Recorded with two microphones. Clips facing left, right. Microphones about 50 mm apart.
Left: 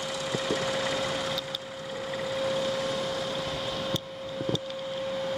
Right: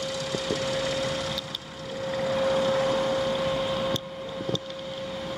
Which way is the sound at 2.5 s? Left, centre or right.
Right.